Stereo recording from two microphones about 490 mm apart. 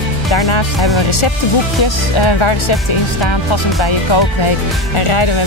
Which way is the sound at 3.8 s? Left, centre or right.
Left.